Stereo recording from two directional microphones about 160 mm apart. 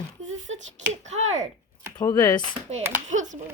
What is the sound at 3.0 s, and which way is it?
Speech, 50° right (ahead or behind).